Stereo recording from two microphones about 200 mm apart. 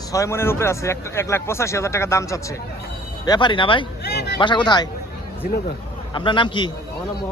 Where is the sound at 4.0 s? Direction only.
55° left (ahead or behind).